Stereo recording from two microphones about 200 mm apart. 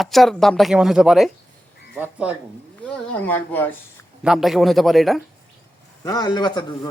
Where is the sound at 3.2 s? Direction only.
10° left (ahead or behind).